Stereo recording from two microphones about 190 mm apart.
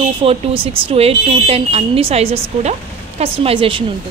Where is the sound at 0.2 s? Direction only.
30° right (ahead or behind).